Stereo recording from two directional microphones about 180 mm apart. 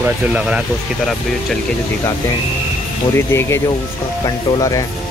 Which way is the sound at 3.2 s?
15° left (ahead or behind).